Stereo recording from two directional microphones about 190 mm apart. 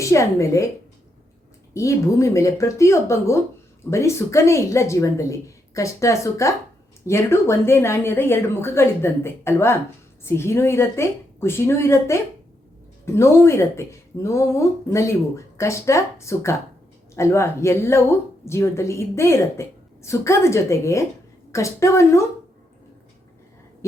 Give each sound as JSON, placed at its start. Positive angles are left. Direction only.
{"t": 0.0, "sound": "speech", "side_deg": 15}
{"t": 1.7, "sound": "speech", "side_deg": 15}